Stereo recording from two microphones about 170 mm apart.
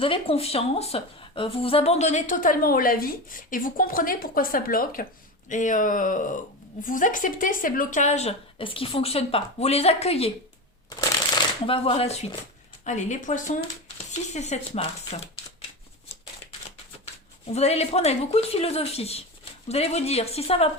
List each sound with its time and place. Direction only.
0.0 s a woman's voice: 35° left (ahead or behind)
11.6 s a woman's voice: 35° left (ahead or behind)
17.5 s speech: 40° left (ahead or behind)